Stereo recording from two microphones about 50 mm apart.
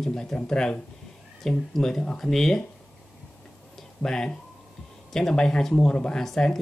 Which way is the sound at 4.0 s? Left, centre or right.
Centre.